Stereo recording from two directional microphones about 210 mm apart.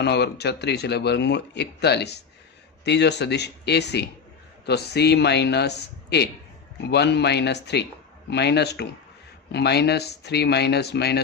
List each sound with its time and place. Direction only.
0.0 s speech: 50° left (ahead or behind)